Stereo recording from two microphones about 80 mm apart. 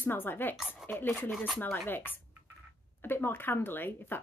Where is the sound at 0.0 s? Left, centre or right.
Left.